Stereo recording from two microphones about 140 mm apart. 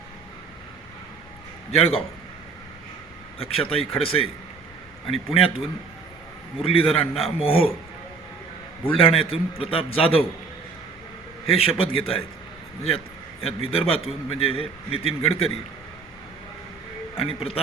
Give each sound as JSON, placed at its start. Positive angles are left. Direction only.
{"t": 1.7, "sound": "a man's voice", "side_deg": 45}
{"t": 3.3, "sound": "a man's voice", "side_deg": 45}
{"t": 8.8, "sound": "a man's voice", "side_deg": 40}
{"t": 11.4, "sound": "a man's voice", "side_deg": 45}
{"t": 13.4, "sound": "a man's voice", "side_deg": 40}
{"t": 17.2, "sound": "a man's voice", "side_deg": 45}